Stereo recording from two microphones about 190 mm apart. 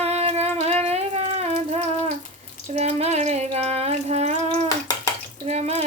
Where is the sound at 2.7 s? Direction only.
35° right (ahead or behind).